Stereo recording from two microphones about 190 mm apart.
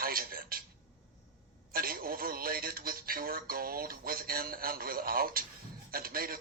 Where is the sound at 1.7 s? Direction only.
50° right (ahead or behind).